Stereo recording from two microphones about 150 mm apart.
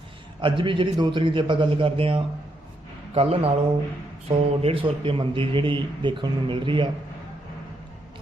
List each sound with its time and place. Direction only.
0.4 s a man's voice: 35° right (ahead or behind)